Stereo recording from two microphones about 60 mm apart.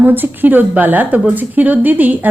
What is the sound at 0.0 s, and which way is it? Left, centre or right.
A woman's voice, right.